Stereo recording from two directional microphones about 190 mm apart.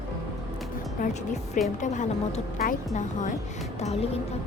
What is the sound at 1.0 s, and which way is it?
Speech, 40° left (ahead or behind).